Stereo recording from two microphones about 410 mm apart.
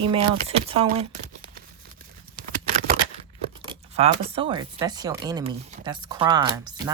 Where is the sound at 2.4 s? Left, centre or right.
Right.